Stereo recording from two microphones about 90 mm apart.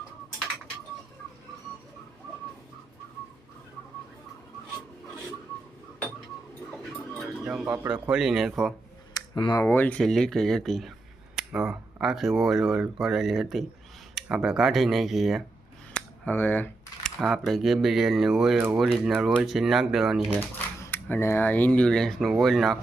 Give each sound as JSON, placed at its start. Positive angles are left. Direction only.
{"t": 7.4, "sound": "speech", "side_deg": -10}
{"t": 9.1, "sound": "a sound", "side_deg": 50}
{"t": 9.6, "sound": "speech", "side_deg": 20}
{"t": 10.0, "sound": "speech", "side_deg": 5}
{"t": 11.3, "sound": "speech", "side_deg": -10}
{"t": 15.9, "sound": "a sound", "side_deg": 15}
{"t": 17.2, "sound": "speech", "side_deg": 0}
{"t": 20.3, "sound": "typewriter", "side_deg": 30}
{"t": 21.1, "sound": "speech", "side_deg": 25}